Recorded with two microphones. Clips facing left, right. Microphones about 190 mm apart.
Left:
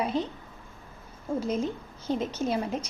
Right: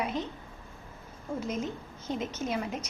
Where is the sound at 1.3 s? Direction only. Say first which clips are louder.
Left 5 dB; 30° left (ahead or behind).